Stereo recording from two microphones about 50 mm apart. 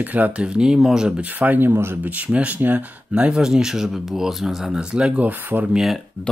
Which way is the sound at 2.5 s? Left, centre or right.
Right.